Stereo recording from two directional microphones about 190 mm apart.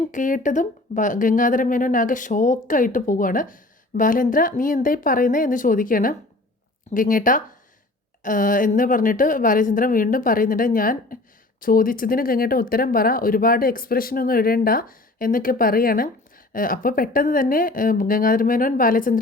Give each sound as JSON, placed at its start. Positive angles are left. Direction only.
{"t": 0.1, "sound": "speech", "side_deg": 45}